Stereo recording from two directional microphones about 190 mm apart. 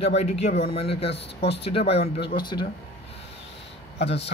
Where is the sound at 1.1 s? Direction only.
65° left (ahead or behind).